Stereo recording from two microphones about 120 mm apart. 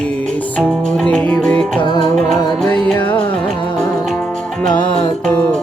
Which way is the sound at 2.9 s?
45° left (ahead or behind).